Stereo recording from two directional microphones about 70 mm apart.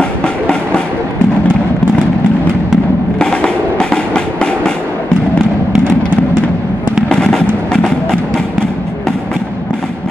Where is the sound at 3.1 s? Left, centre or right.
Centre.